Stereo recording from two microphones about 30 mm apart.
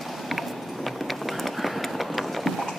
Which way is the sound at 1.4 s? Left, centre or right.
Centre.